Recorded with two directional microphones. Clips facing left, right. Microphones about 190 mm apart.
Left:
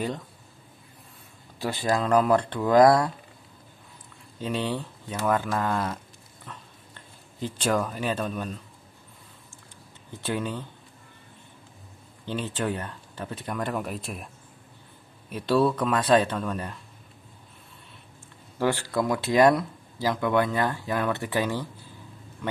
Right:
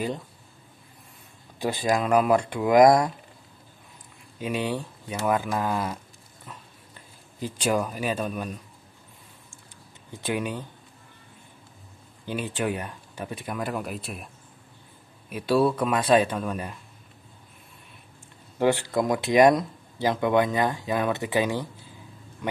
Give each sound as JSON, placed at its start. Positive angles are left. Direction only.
{"t": 1.6, "sound": "speech", "side_deg": -15}
{"t": 4.4, "sound": "speech", "side_deg": -10}
{"t": 6.4, "sound": "dog", "side_deg": -10}
{"t": 10.2, "sound": "speech", "side_deg": -15}
{"t": 12.3, "sound": "speech", "side_deg": -10}
{"t": 18.6, "sound": "a man's voice", "side_deg": -20}